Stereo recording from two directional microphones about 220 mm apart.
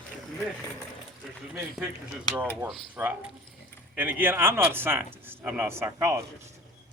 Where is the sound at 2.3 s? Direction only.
5° right (ahead or behind).